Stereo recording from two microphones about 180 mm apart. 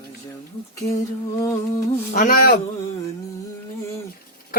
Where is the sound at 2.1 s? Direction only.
50° left (ahead or behind).